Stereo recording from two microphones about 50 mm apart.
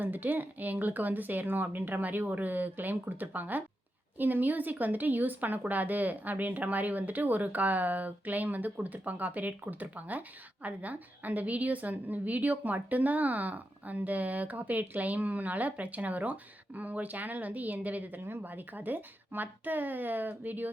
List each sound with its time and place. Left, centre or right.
0.0 s speech: right
18.2 s speech: right